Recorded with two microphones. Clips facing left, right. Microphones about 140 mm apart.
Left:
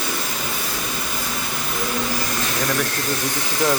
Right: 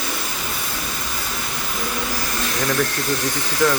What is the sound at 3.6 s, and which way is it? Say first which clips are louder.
Speech: right 2 dB; 20° left (ahead or behind).